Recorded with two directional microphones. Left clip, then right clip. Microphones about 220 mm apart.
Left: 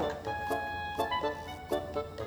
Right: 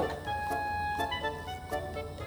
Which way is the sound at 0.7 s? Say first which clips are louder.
Right 1 dB; 35° right (ahead or behind).